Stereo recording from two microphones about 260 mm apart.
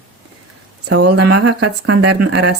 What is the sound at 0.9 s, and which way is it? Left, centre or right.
Speech, right.